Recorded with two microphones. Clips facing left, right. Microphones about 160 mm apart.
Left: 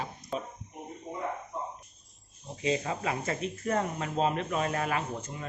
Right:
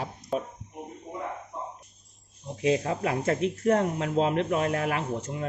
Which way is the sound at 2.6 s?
60° right (ahead or behind).